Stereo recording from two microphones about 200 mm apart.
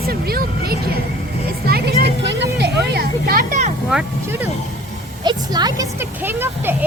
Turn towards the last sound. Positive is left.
turn(degrees=-10)  # may be behind; listen again after turning